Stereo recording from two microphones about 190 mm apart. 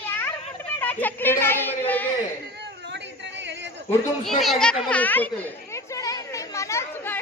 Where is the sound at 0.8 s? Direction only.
10° left (ahead or behind).